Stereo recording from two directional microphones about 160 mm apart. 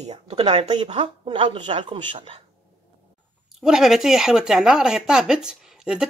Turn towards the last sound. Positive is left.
turn(degrees=-5)  # may be behind; listen again after turning